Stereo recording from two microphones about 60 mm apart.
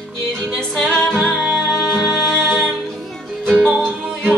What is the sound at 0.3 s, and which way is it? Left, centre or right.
Music, centre.